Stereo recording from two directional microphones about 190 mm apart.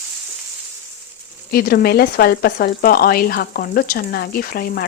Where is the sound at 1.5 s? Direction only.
55° left (ahead or behind).